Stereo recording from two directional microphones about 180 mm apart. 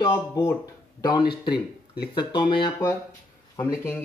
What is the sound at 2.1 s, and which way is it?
Speech, 25° left (ahead or behind).